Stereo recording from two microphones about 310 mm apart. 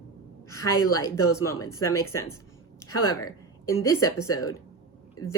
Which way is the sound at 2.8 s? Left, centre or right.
Left.